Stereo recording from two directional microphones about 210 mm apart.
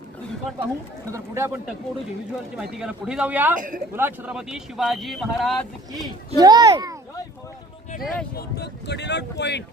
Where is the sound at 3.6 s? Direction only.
40° right (ahead or behind).